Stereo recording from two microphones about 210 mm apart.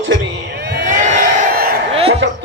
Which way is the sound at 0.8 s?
35° right (ahead or behind).